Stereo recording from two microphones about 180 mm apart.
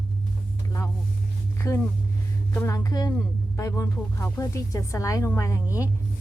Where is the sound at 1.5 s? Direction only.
15° left (ahead or behind).